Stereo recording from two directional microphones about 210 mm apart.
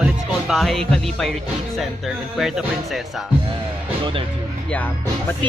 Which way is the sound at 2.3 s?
Centre (ahead or behind).